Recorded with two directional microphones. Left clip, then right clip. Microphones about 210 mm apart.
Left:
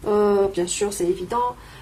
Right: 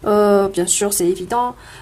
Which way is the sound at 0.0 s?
40° right (ahead or behind).